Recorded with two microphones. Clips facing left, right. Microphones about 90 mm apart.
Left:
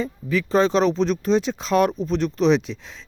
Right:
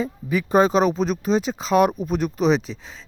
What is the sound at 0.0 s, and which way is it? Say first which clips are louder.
Speech: even; 15° right (ahead or behind).